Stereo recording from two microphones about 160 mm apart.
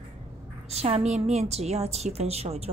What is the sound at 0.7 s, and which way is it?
A woman's voice, 40° right (ahead or behind).